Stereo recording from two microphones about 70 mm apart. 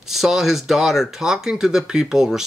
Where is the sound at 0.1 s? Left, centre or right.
Centre.